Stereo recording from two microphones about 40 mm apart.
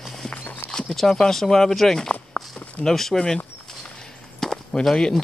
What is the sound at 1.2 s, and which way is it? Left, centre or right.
Speech, centre.